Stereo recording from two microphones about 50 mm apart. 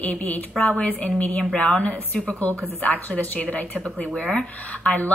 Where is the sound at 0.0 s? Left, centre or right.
Left.